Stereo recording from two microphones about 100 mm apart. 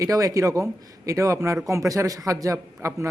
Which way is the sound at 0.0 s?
35° right (ahead or behind).